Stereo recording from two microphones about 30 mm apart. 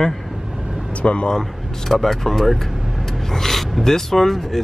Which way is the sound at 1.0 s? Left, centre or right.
Left.